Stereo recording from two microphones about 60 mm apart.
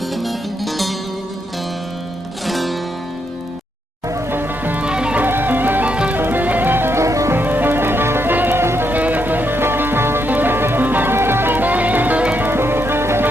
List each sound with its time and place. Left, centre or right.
0.1 s music: centre
2.5 s music: centre
4.3 s music: right
4.8 s music: centre
5.2 s music: right
5.9 s music: centre
6.1 s music: right
7.0 s music: right
7.3 s music: right
8.9 s music: right
12.5 s music: right